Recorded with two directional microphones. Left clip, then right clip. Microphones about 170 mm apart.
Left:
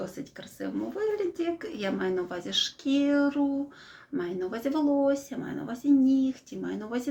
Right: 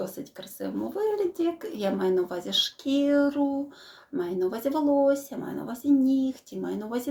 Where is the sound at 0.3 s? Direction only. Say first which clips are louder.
Right 1 dB; 15° left (ahead or behind).